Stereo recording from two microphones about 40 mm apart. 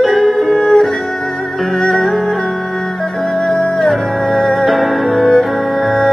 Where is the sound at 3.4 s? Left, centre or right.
Centre.